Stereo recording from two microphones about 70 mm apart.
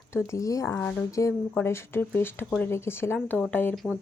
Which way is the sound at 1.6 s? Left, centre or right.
Left.